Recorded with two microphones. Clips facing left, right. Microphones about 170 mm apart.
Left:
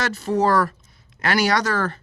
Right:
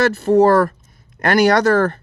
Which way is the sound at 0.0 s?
55° right (ahead or behind).